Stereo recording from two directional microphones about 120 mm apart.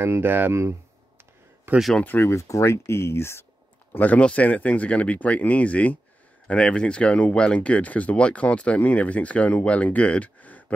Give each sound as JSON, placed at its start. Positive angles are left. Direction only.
{"t": 0.0, "sound": "speech", "side_deg": -20}
{"t": 1.8, "sound": "speech", "side_deg": 0}
{"t": 2.0, "sound": "speech", "side_deg": 20}